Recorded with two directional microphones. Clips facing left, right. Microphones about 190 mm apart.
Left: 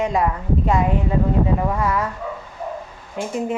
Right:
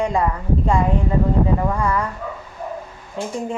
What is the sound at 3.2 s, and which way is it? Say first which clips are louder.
Speech: even; 15° left (ahead or behind).